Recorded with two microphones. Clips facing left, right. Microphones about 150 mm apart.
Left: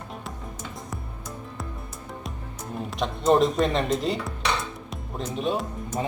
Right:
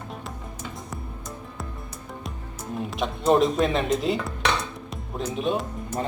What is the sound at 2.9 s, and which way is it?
Speech, centre (ahead or behind).